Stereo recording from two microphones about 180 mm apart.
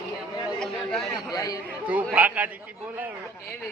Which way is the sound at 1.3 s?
20° left (ahead or behind).